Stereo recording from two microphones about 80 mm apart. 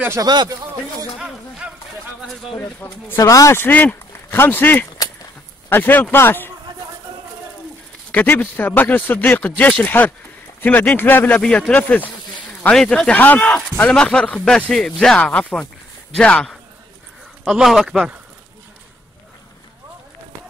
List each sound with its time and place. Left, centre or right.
0.2 s speech: right
1.1 s a sound: centre
2.6 s speech: left
3.2 s speech: left
3.5 s speech: left
4.9 s a sound: left
5.7 s speech: left
8.1 s speech: centre
12.7 s speech: centre
17.5 s a man's voice: centre